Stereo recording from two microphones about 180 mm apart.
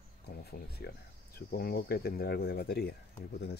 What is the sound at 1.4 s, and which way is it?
Speech, 55° left (ahead or behind).